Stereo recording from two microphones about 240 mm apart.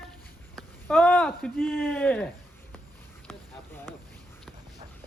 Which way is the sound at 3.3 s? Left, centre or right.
Centre.